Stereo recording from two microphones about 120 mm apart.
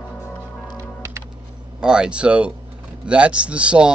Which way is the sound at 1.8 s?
5° right (ahead or behind).